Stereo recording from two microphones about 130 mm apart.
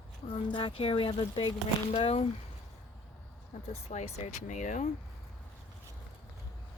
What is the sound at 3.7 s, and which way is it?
Speech, 55° left (ahead or behind).